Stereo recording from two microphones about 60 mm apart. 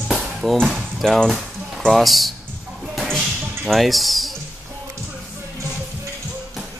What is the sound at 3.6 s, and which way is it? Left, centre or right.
Speech, centre.